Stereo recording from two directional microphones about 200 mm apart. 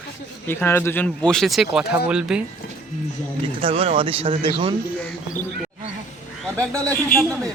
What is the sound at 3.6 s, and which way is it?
Speech, 30° right (ahead or behind).